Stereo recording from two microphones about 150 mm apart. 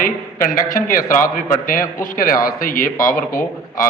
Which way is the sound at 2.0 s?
70° left (ahead or behind).